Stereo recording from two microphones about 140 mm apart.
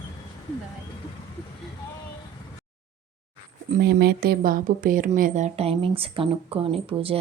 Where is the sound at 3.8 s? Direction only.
90° right; by 5.5 s 75° right (ahead or behind).